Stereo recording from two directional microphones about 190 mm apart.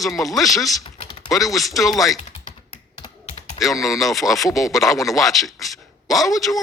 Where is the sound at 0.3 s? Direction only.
Centre (ahead or behind).